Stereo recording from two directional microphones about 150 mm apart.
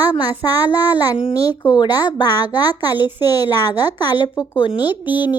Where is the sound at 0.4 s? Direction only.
25° left (ahead or behind).